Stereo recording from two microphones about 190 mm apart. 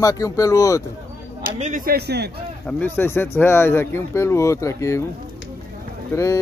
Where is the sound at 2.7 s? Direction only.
10° left (ahead or behind).